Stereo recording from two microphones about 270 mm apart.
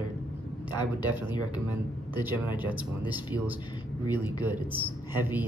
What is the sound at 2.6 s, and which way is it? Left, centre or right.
A man's voice, centre.